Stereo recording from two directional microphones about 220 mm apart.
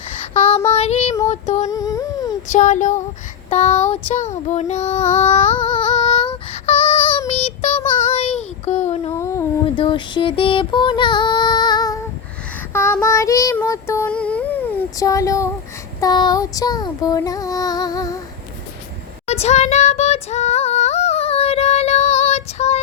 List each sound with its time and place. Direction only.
0.3 s child singing: 30° left (ahead or behind)
0.7 s female singing: 30° left (ahead or behind)
1.7 s humming: 15° left (ahead or behind)
2.5 s a sound: 35° left (ahead or behind)
3.5 s female singing: 30° left (ahead or behind)
7.3 s child singing: 30° left (ahead or behind)
9.0 s humming: 10° left (ahead or behind)
9.8 s music: 25° left (ahead or behind)
12.7 s child singing: 10° left (ahead or behind)
16.0 s female singing: 20° left (ahead or behind)
19.3 s female singing: 30° left (ahead or behind)